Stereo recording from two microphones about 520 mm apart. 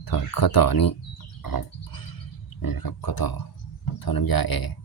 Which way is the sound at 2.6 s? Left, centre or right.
Left.